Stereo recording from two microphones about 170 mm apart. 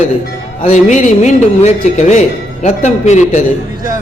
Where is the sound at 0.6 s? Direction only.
45° left (ahead or behind).